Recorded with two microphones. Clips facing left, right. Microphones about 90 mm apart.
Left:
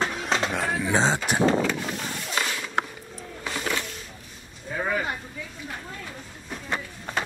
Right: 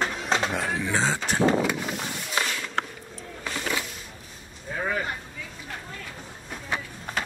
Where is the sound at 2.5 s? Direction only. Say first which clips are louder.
Left 2 dB; 10° left (ahead or behind).